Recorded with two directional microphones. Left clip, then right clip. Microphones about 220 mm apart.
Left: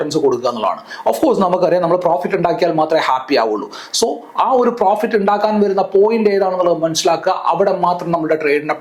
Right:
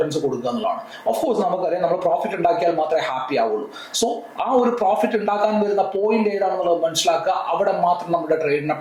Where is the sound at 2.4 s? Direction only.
15° left (ahead or behind).